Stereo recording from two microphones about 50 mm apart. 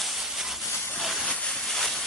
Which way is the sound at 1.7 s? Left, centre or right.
Centre.